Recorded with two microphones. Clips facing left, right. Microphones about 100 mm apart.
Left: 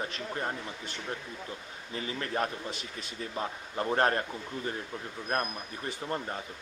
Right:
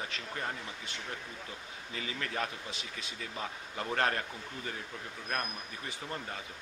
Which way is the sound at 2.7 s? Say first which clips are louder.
Left 4 dB; 50° left (ahead or behind).